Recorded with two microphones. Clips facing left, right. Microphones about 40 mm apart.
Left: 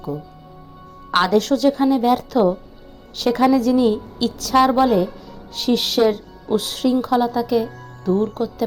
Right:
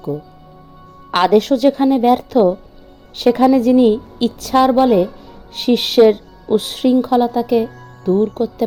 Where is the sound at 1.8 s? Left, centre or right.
Right.